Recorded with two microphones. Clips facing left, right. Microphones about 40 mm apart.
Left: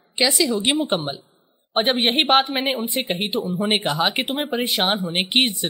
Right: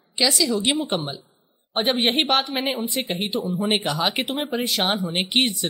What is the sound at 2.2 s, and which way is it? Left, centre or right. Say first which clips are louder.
A woman's voice: left 4 dB; left.